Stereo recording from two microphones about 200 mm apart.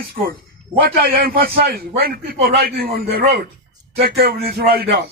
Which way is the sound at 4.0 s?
50° right (ahead or behind).